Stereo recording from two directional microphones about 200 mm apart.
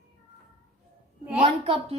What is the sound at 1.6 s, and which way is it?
Speech, 30° right (ahead or behind).